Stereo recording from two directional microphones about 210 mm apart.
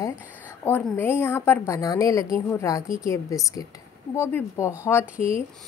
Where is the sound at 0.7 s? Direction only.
10° left (ahead or behind).